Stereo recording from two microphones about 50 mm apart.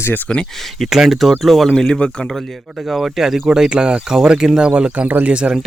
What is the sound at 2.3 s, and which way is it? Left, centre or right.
Speech, centre.